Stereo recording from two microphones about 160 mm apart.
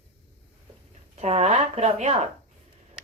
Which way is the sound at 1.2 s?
40° right (ahead or behind).